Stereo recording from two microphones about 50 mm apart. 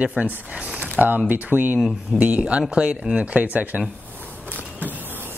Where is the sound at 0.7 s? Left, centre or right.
Right.